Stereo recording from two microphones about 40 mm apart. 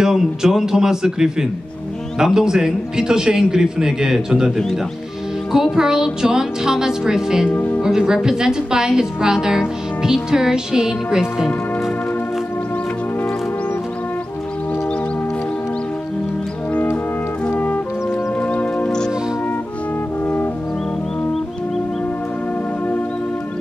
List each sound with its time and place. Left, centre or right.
0.0 s a woman's voice: centre
5.5 s a woman's voice: centre
7.5 s speech: left
7.8 s a woman's voice: centre
17.5 s music: left
18.4 s music: left